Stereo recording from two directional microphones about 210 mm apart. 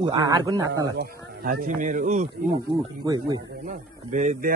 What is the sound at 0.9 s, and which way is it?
Speech, 45° right (ahead or behind).